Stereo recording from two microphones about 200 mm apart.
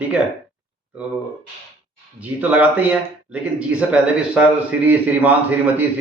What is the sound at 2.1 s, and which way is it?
A man's voice, 10° right (ahead or behind).